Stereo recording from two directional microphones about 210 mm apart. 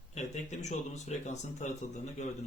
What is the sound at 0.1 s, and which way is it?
Speech, 35° left (ahead or behind).